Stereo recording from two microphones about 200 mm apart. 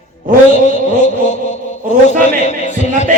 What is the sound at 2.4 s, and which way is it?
Chant, 35° left (ahead or behind).